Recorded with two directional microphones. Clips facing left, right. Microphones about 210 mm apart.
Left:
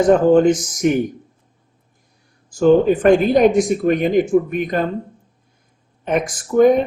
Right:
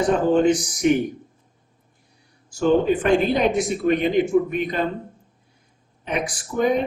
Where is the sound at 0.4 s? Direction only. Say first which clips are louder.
Left 3 dB; 45° left (ahead or behind).